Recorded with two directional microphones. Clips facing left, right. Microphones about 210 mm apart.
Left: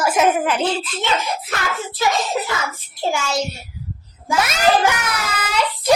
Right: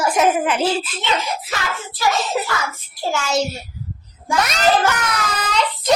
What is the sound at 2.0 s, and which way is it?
Child singing, 20° left (ahead or behind).